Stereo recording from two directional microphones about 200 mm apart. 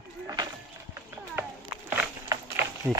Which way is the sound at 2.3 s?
15° right (ahead or behind).